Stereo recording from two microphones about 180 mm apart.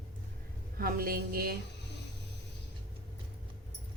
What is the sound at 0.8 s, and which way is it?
Speech, 55° right (ahead or behind).